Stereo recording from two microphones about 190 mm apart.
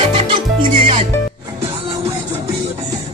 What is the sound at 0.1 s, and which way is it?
Music, 25° right (ahead or behind).